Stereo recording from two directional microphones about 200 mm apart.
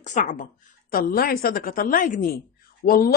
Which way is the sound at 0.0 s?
40° left (ahead or behind).